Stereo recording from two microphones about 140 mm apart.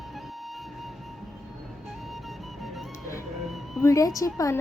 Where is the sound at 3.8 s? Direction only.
20° left (ahead or behind).